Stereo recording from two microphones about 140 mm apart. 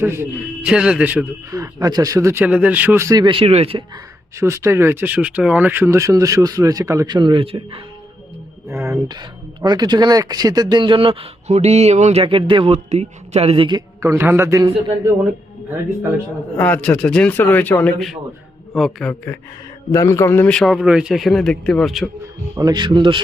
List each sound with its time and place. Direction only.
0.0 s a man's voice: 15° right (ahead or behind)
1.5 s speech: 25° right (ahead or behind)
2.4 s speech: 10° right (ahead or behind); by 3.8 s 45° right (ahead or behind)
4.4 s speech: 20° right (ahead or behind); by 7.8 s 40° right (ahead or behind)
8.7 s a sound: 20° right (ahead or behind)
9.0 s speech: 30° right (ahead or behind); by 12.2 s 55° right (ahead or behind)
12.2 s speech: 35° right (ahead or behind)
14.0 s speech: 20° right (ahead or behind)
16.6 s a man's voice: 10° left (ahead or behind)
18.7 s a man's voice: centre (ahead or behind)
19.9 s a man's voice: 20° left (ahead or behind)
20.5 s a man's voice: centre (ahead or behind)
22.5 s speech: 30° right (ahead or behind)